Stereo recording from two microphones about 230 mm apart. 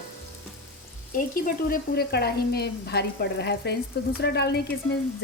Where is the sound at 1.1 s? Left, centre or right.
Left.